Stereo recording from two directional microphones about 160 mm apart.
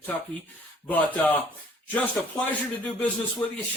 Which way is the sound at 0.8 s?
10° left (ahead or behind).